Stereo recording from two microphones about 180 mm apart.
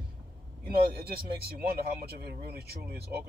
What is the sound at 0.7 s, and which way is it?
Speech, 60° right (ahead or behind).